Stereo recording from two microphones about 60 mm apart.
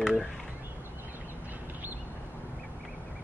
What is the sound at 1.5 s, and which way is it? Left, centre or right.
Duck, right.